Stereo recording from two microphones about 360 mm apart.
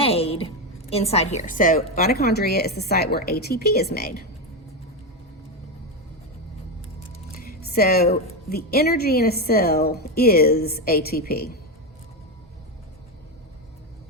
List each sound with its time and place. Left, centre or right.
0.0 s a woman's voice: centre
7.3 s a woman's voice: left